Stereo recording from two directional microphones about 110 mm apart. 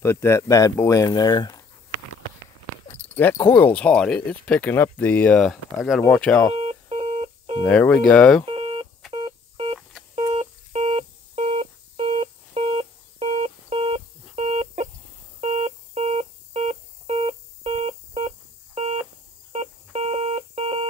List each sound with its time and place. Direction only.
0.0 s speech: 25° left (ahead or behind); by 1.6 s 40° left (ahead or behind)
3.3 s speech: 20° left (ahead or behind)
6.5 s telephone dialing: 65° right (ahead or behind)
7.6 s speech: 10° left (ahead or behind)
8.5 s telephone dialing: 55° right (ahead or behind)
10.1 s telephone dialing: 70° right (ahead or behind); by 14.9 s 90° right
15.4 s a sound: 90° right
17.2 s music: 65° right (ahead or behind)
19.5 s telephone dialing: 85° right; by 20.8 s 65° right (ahead or behind)